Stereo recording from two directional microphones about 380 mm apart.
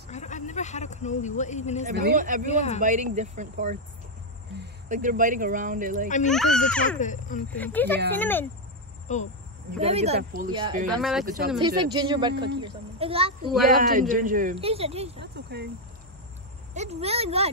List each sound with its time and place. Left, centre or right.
0.1 s a man's voice: centre
1.9 s speech: right
2.4 s speech: centre
2.8 s speech: centre
6.2 s a child's voice: centre
7.0 s speech: centre
7.5 s a child's voice: centre
9.0 s speech: centre
9.7 s speech: centre
10.9 s a child's voice: centre
11.6 s speech: centre
15.3 s cricket: right
16.7 s speech: centre